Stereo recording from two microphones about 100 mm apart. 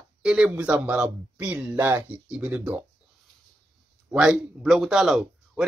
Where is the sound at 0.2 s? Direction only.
10° right (ahead or behind).